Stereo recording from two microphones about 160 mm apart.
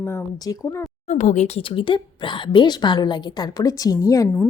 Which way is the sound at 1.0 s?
45° left (ahead or behind).